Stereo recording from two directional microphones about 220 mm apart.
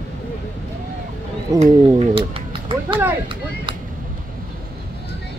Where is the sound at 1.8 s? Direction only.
20° right (ahead or behind).